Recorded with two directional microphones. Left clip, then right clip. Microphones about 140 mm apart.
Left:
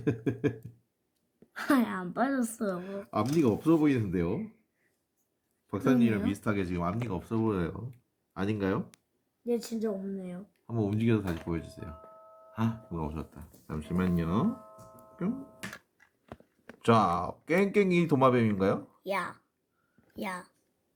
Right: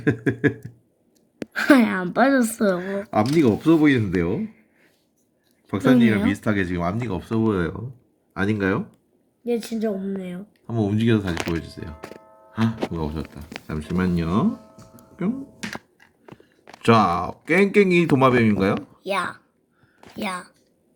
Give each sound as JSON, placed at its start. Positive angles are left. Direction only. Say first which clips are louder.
{"t": 0.0, "sound": "speech", "louder": "right 9 dB", "side_deg": -10}
{"t": 1.5, "sound": "a woman's voice", "louder": "right 11 dB", "side_deg": -45}
{"t": 2.8, "sound": "speech", "louder": "right 10 dB", "side_deg": -20}
{"t": 5.6, "sound": "speech", "louder": "right 9 dB", "side_deg": -15}
{"t": 9.4, "sound": "a woman's voice", "louder": "right 7 dB", "side_deg": -45}
{"t": 10.7, "sound": "speech", "louder": "right 8 dB", "side_deg": -15}
{"t": 16.8, "sound": "speech", "louder": "right 8 dB", "side_deg": -10}
{"t": 19.0, "sound": "speech", "louder": "right 8 dB", "side_deg": 10}